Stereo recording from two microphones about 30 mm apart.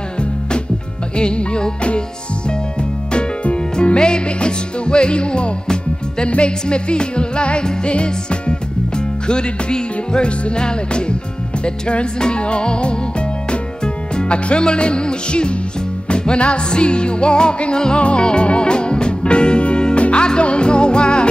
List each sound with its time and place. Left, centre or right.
1.1 s music: left
14.1 s music: left